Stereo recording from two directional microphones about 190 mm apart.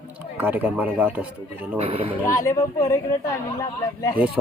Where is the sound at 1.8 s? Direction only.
30° right (ahead or behind).